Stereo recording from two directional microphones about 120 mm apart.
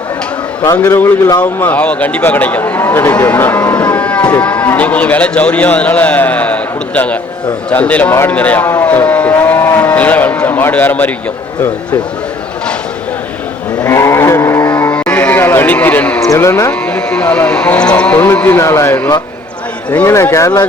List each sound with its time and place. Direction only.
0.8 s speech: 15° left (ahead or behind)
9.4 s moo: 20° left (ahead or behind)
13.8 s a sound: 25° left (ahead or behind)
14.8 s a sound: 15° left (ahead or behind)
16.3 s speech: 25° left (ahead or behind)
16.8 s speech: 10° left (ahead or behind); by 20.7 s 25° left (ahead or behind)